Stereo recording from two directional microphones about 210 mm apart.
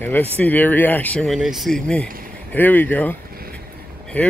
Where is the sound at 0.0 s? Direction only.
10° left (ahead or behind).